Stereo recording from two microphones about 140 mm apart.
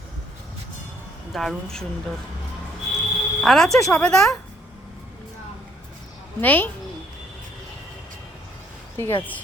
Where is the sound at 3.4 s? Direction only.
Centre (ahead or behind).